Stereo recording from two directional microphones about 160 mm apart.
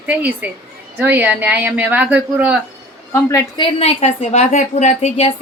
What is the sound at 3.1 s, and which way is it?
Speech, 15° left (ahead or behind).